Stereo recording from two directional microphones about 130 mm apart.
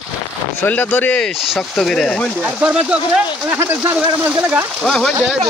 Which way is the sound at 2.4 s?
10° right (ahead or behind).